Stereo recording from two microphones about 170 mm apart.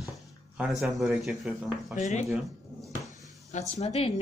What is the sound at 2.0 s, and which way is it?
Speech, 40° left (ahead or behind).